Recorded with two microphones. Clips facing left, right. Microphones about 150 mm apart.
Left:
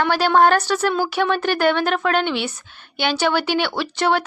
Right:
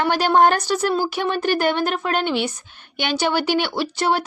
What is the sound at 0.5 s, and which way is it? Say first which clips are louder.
Speech: left 2 dB; 10° right (ahead or behind).